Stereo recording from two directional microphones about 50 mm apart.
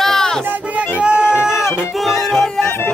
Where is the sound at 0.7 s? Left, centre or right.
Right.